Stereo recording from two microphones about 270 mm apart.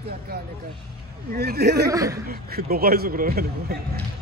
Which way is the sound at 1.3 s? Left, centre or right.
Right.